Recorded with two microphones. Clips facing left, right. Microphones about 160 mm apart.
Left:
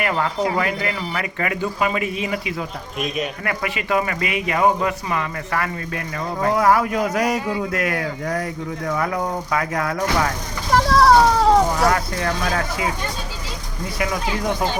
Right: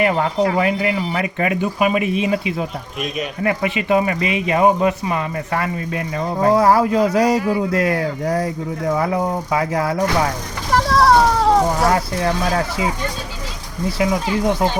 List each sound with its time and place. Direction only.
0.0 s speech: 25° right (ahead or behind)
10.7 s vehicle: centre (ahead or behind)
11.9 s speech: 25° right (ahead or behind)
14.0 s speech: 25° right (ahead or behind)